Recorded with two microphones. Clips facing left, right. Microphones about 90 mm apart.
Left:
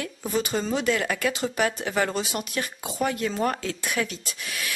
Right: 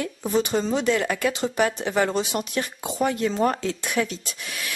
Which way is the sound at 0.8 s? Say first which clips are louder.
Right 2 dB; 20° right (ahead or behind).